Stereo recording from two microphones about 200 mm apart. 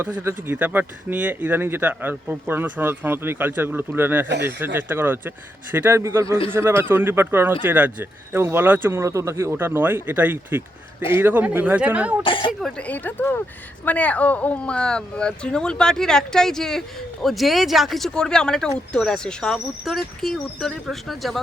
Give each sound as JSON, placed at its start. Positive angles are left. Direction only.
{"t": 0.0, "sound": "speech", "side_deg": -10}
{"t": 12.2, "sound": "a woman's voice", "side_deg": 25}
{"t": 12.6, "sound": "speech", "side_deg": 5}